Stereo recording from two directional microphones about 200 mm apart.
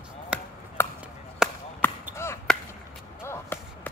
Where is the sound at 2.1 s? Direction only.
15° left (ahead or behind).